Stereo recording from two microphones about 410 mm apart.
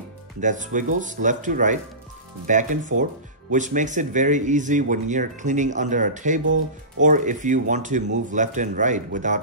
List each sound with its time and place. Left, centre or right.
0.4 s speech: centre